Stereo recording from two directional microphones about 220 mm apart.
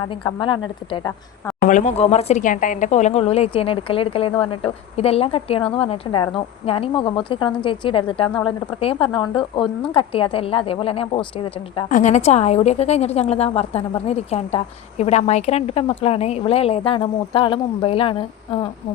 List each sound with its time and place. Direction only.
0.1 s speech: 20° left (ahead or behind)
1.6 s speech: 35° left (ahead or behind)